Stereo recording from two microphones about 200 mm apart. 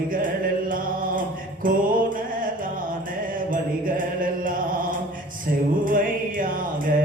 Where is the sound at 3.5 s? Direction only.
45° right (ahead or behind).